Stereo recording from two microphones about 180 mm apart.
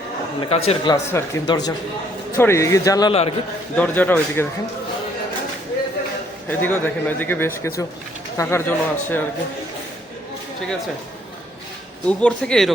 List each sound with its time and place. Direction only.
0.5 s speech: 35° left (ahead or behind)
0.9 s a man's voice: 15° left (ahead or behind)
3.1 s speech: 30° left (ahead or behind)
3.8 s a man's voice: 10° left (ahead or behind)
6.5 s a man's voice: 10° left (ahead or behind)
12.0 s speech: 5° left (ahead or behind)